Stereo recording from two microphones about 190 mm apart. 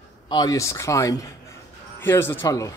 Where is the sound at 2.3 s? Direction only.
15° left (ahead or behind).